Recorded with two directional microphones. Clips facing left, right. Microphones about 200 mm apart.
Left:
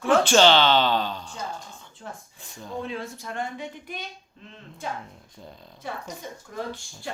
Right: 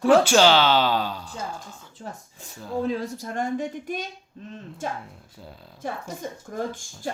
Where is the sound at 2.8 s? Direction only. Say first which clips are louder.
Right 8 dB; 40° right (ahead or behind).